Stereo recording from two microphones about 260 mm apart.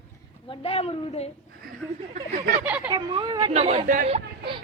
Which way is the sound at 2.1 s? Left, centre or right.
Right.